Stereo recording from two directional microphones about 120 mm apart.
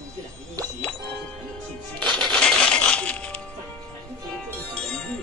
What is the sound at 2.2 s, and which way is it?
Music, 5° left (ahead or behind).